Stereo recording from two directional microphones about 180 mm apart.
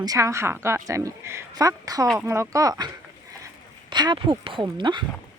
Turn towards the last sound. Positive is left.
turn(degrees=-25)  # may be behind; listen again after turning